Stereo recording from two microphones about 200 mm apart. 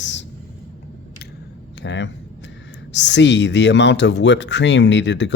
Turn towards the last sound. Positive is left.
turn(degrees=65)  # may be behind; listen again after turning